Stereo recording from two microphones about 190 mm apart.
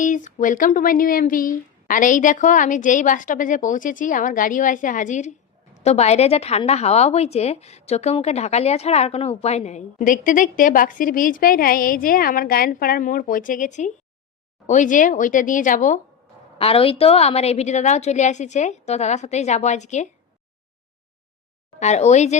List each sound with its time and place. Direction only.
0.0 s a woman's voice: 40° left (ahead or behind)
16.6 s a woman's voice: 30° left (ahead or behind)
21.8 s a woman's voice: 35° left (ahead or behind)